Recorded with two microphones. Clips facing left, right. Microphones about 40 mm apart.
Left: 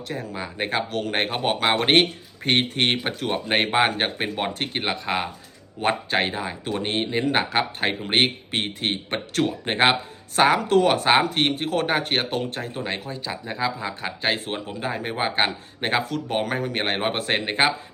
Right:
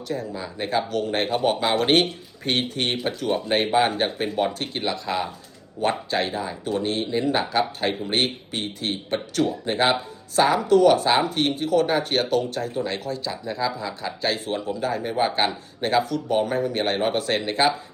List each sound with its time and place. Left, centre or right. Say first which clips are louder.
0.1 s speech: right 2 dB; left
1.4 s speech: even; left